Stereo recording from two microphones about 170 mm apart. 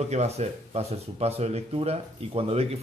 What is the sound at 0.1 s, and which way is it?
Speech, 40° right (ahead or behind).